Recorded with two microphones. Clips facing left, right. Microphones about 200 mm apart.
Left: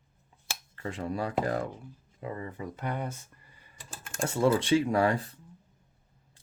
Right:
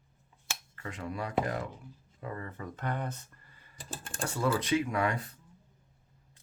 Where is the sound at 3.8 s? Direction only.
30° right (ahead or behind).